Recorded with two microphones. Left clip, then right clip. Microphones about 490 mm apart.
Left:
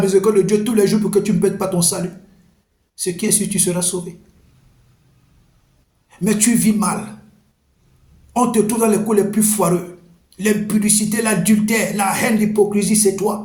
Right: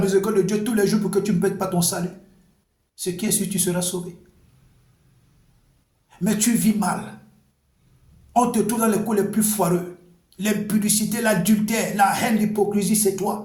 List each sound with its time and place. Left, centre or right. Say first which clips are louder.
0.0 s speech: left 6 dB; right
3.0 s speech: left 5 dB; right
6.1 s speech: left 5 dB; right
8.3 s speech: left 3 dB; right